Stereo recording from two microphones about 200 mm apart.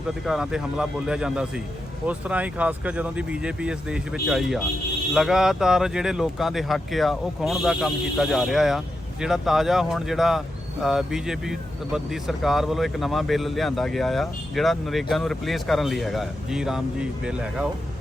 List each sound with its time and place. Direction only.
0.3 s speech: 5° right (ahead or behind)